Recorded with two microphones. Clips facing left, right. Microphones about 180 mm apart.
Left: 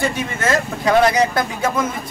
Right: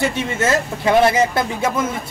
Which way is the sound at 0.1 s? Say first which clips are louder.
Right 1 dB; 25° right (ahead or behind).